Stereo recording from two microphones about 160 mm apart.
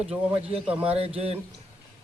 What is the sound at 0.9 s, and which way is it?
Speech, 40° right (ahead or behind).